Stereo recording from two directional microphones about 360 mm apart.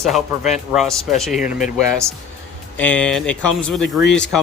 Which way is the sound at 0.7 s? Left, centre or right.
Centre.